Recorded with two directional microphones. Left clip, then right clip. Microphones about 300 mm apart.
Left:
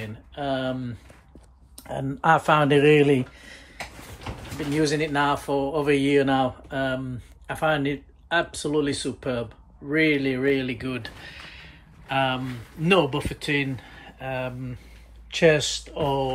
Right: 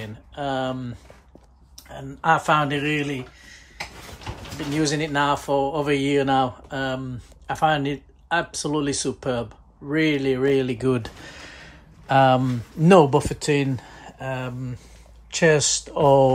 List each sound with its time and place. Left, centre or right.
0.0 s speech: centre
1.8 s speech: centre
4.7 s speech: centre
12.1 s speech: centre